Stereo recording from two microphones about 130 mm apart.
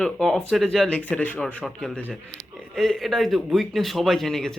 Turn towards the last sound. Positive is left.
turn(degrees=5)  # may be behind; listen again after turning